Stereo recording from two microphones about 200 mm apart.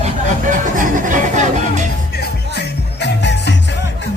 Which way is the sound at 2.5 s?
60° left (ahead or behind).